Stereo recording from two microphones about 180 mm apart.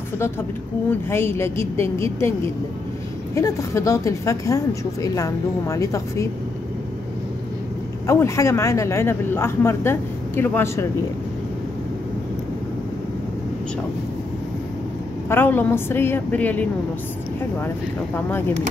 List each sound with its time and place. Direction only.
1.1 s speech: 15° left (ahead or behind)
3.3 s speech: 15° left (ahead or behind)
8.1 s speech: 15° left (ahead or behind)
15.2 s speech: 10° left (ahead or behind)